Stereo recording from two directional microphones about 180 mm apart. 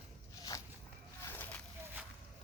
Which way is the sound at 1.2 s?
10° left (ahead or behind).